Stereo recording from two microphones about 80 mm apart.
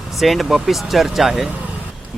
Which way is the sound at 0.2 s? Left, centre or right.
Centre.